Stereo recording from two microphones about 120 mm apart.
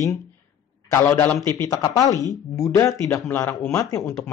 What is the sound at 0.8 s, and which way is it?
A man's voice, 25° left (ahead or behind).